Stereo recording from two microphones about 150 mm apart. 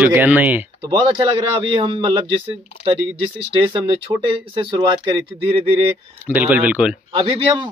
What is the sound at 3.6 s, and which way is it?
Speech, 35° right (ahead or behind).